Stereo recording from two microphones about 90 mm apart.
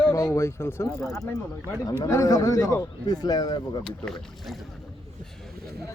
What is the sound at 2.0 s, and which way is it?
Speech, 35° left (ahead or behind).